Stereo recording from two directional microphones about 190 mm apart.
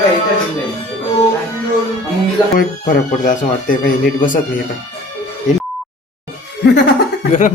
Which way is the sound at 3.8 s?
45° left (ahead or behind).